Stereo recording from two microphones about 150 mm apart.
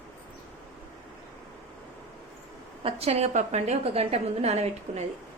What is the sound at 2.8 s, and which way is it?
A woman's voice, 45° right (ahead or behind).